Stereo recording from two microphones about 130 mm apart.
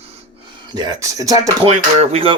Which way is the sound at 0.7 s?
30° right (ahead or behind).